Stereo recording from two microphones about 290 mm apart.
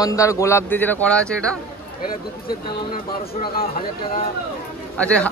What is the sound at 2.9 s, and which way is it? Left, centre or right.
Speech, left.